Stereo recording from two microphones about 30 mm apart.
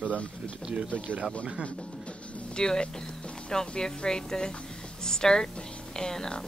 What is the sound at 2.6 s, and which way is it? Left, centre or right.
A woman's voice, left.